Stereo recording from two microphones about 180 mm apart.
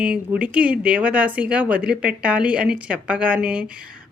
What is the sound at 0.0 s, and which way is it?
A woman's voice, 5° right (ahead or behind).